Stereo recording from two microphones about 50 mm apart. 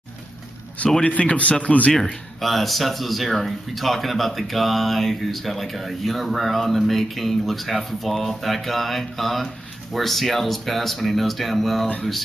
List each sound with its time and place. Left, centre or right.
1.0 s speech: left
2.0 s speech: centre